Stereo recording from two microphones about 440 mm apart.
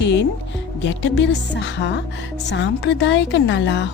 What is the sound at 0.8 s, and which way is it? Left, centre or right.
A woman's voice, left.